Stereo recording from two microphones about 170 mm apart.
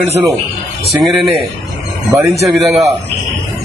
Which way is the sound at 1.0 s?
Centre (ahead or behind).